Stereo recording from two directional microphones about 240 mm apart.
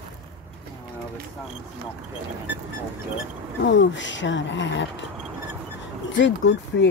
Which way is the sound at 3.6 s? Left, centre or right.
Left.